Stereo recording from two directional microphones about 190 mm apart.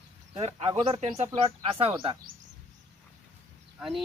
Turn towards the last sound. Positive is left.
turn(degrees=0)  # may be behind; listen again after turning